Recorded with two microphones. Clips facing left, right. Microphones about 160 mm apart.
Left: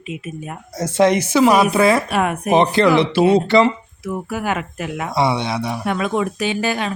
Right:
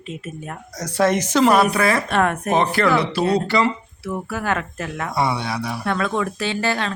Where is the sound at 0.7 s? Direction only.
25° left (ahead or behind).